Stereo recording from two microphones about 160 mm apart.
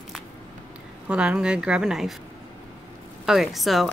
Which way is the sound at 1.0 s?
5° right (ahead or behind).